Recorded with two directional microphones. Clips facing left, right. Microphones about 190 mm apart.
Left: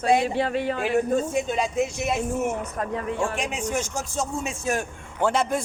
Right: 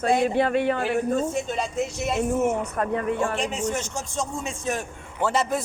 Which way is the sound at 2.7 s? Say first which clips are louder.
Right 3 dB; 60° right (ahead or behind).